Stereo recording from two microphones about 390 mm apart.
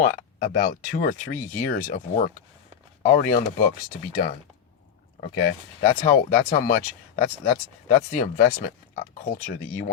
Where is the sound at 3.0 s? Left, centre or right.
Centre.